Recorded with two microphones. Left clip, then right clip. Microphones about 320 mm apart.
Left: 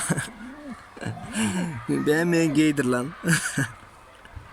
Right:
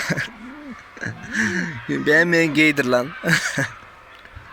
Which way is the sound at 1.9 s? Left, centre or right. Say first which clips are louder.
Right 6 dB; centre.